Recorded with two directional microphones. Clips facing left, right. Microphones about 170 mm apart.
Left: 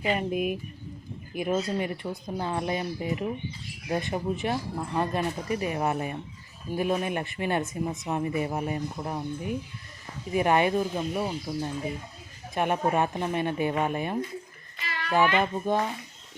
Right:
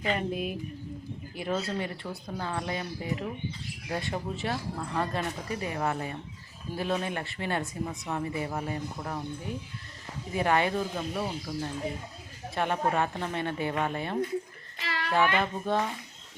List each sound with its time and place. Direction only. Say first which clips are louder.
0.0 s speech: left 3 dB; 15° left (ahead or behind)